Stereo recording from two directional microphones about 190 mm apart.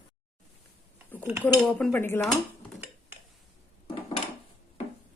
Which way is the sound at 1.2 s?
10° right (ahead or behind).